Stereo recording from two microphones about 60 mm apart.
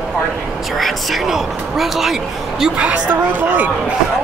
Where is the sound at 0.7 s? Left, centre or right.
Centre.